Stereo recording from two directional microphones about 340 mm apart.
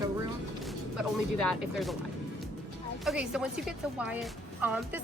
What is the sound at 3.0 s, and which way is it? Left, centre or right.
A woman's voice, centre.